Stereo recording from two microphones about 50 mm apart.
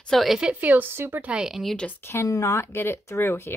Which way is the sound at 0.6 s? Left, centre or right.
Right.